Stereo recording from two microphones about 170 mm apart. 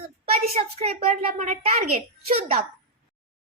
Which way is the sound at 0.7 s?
40° right (ahead or behind).